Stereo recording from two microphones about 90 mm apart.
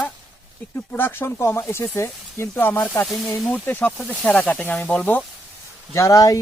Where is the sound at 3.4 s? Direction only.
15° left (ahead or behind).